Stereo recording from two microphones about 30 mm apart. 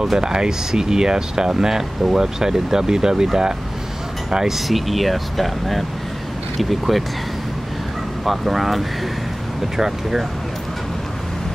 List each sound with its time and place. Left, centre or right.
0.2 s speech: right
4.6 s speech: centre
8.3 s speech: centre